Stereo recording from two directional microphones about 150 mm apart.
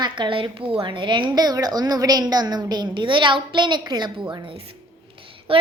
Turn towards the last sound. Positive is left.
turn(degrees=-35)  # may be behind; listen again after turning